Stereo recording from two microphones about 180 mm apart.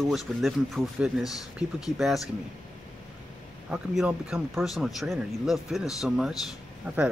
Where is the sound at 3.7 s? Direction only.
5° right (ahead or behind).